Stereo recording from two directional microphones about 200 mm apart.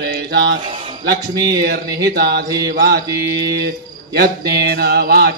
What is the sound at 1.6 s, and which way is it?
Speech, 50° right (ahead or behind).